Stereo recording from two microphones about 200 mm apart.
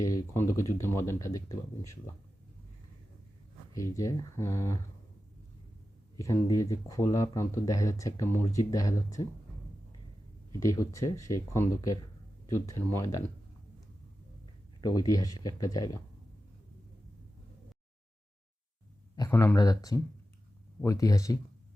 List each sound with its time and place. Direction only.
0.0 s speech: 15° left (ahead or behind)
3.8 s speech: 15° left (ahead or behind)
6.1 s speech: 15° left (ahead or behind)
10.6 s speech: 15° left (ahead or behind)
14.8 s speech: 20° left (ahead or behind)
19.1 s speech: 15° left (ahead or behind)